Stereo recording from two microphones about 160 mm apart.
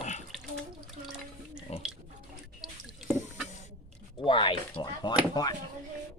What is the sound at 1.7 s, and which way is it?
Pig, 40° left (ahead or behind).